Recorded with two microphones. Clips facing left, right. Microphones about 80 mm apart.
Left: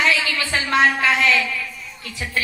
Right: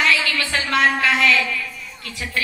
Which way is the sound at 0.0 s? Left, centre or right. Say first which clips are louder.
Even; left.